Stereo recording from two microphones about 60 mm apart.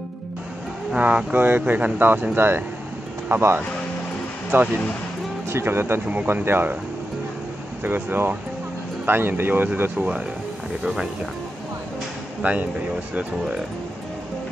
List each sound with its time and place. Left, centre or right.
0.9 s speech: right
1.3 s speech: right
7.8 s speech: right
10.8 s speech: centre
12.4 s speech: right